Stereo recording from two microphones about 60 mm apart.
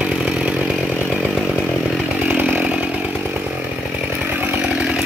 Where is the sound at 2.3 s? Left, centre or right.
Right.